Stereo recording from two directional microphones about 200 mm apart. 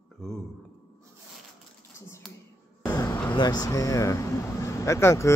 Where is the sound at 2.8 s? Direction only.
20° left (ahead or behind).